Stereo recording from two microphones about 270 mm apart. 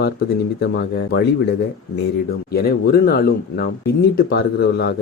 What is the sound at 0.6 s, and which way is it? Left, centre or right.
Speech, left.